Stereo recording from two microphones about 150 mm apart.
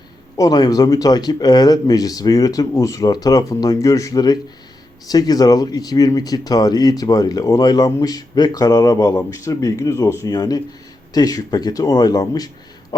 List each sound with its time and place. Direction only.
0.3 s speech: 25° left (ahead or behind)